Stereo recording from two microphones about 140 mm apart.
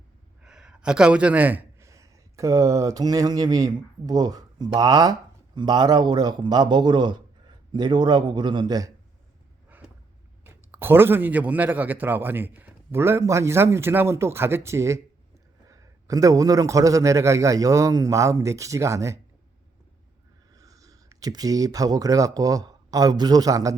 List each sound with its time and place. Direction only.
0.4 s a man's voice: 5° right (ahead or behind); by 8.9 s 30° right (ahead or behind)
10.4 s a man's voice: 15° right (ahead or behind)
20.6 s speech: 25° right (ahead or behind)